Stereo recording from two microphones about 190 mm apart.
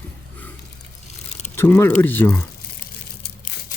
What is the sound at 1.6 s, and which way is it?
Speech, 10° left (ahead or behind).